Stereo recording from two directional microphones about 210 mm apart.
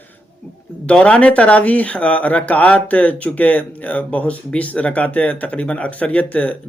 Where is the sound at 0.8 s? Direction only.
5° left (ahead or behind).